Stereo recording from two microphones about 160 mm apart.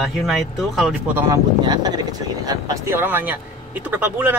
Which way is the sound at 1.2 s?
25° right (ahead or behind).